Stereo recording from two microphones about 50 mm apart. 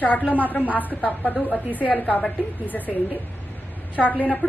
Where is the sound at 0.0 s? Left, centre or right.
Left.